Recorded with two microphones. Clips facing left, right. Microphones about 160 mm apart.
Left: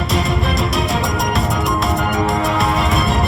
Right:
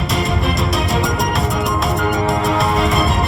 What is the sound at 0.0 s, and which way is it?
Music, centre (ahead or behind).